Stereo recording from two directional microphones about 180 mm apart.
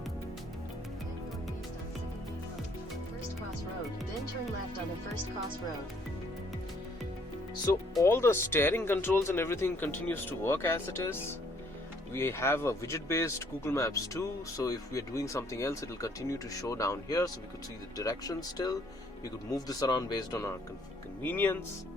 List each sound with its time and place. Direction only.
8.0 s speech: 15° left (ahead or behind)